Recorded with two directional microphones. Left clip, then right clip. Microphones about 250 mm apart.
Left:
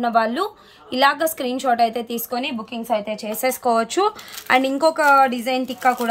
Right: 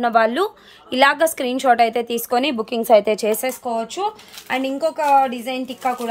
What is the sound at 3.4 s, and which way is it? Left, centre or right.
A woman's voice, centre.